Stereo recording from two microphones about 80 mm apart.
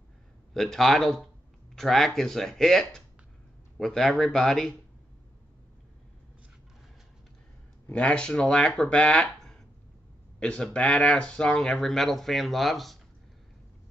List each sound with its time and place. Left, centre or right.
0.6 s speech: centre
7.9 s speech: centre